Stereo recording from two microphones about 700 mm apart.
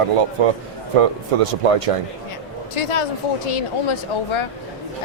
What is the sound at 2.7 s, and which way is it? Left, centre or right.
A woman's voice, left.